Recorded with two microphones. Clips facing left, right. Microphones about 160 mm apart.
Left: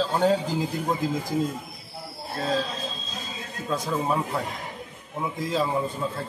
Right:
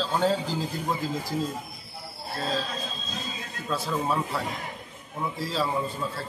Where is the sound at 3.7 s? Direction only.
15° left (ahead or behind).